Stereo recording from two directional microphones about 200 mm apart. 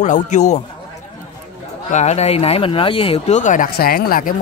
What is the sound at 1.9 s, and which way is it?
Speech, 35° left (ahead or behind).